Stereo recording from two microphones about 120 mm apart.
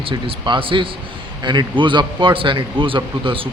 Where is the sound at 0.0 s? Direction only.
45° right (ahead or behind).